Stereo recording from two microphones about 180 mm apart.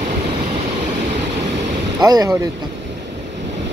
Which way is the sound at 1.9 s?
20° right (ahead or behind).